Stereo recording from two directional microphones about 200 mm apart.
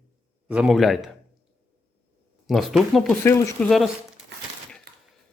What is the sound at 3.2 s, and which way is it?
Speech, 10° left (ahead or behind).